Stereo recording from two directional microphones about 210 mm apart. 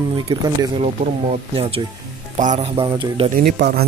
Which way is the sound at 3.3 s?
50° right (ahead or behind).